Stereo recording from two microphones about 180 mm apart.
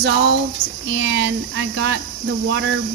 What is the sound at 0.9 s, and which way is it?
Speech, 90° right.